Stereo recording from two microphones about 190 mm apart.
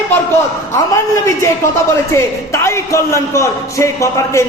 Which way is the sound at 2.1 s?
15° left (ahead or behind).